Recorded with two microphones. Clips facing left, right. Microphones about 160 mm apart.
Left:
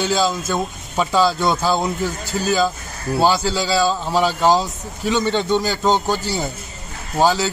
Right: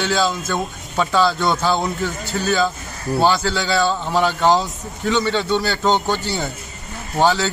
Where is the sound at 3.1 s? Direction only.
10° left (ahead or behind).